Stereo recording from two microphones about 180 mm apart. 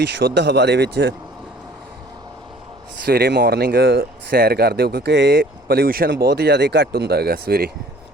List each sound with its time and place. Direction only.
0.0 s speech: 70° right (ahead or behind)
3.1 s speech: 65° right (ahead or behind)